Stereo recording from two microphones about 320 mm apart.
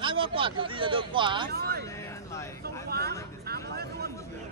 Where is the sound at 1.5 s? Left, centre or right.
Right.